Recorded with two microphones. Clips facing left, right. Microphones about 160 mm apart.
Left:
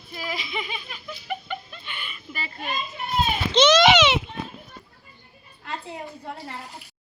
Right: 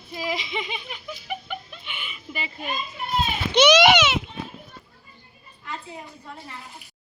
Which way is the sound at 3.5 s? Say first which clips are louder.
Even; 10° right (ahead or behind).